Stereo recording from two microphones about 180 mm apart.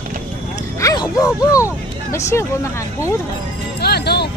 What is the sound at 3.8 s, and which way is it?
Music, 65° left (ahead or behind).